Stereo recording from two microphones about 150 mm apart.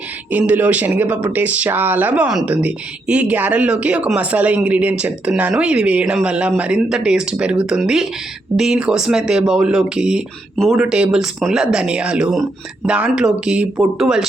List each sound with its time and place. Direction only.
0.3 s speech: 10° right (ahead or behind)